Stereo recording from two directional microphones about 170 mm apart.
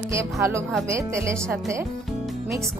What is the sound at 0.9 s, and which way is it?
Speech, 15° right (ahead or behind).